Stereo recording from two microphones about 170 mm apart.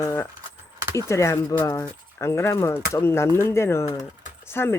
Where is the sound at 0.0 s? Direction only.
20° left (ahead or behind).